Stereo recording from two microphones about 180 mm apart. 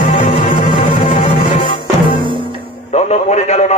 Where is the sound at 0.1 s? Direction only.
45° left (ahead or behind).